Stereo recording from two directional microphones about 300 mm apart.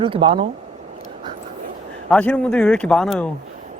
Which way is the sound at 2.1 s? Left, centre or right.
Centre.